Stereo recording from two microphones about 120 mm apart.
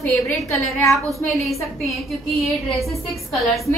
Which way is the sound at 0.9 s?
Centre (ahead or behind).